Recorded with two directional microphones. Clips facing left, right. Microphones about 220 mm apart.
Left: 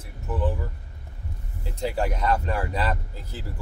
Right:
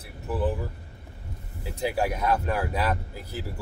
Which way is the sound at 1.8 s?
10° right (ahead or behind).